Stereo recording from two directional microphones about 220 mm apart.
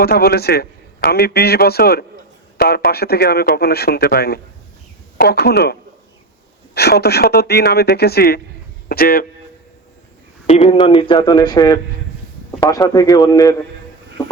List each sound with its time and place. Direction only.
0.0 s a man's voice: 45° left (ahead or behind)
6.7 s a man's voice: 45° left (ahead or behind)
10.4 s a man's voice: 25° left (ahead or behind)